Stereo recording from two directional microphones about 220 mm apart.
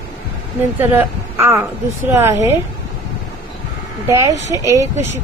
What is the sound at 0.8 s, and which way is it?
A woman's voice, 10° right (ahead or behind).